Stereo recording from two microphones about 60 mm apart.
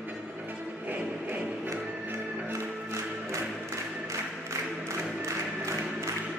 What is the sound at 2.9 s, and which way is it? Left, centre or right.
Music, right.